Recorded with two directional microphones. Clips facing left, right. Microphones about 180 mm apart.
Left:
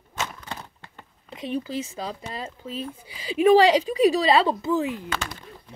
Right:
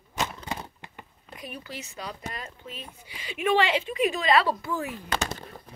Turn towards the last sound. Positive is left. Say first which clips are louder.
# left 6 dB
turn(degrees=20)  # may be behind; listen again after turning